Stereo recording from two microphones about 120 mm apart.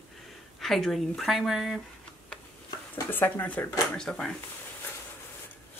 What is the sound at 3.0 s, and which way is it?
Speech, 15° left (ahead or behind).